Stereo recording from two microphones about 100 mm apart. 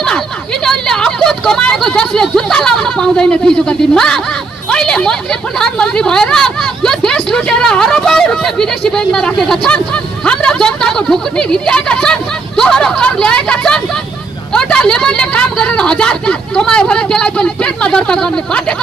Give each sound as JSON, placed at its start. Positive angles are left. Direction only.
{"t": 0.7, "sound": "a woman's voice", "side_deg": 5}